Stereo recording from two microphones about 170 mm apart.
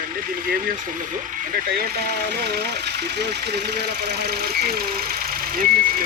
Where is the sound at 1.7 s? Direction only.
65° right (ahead or behind).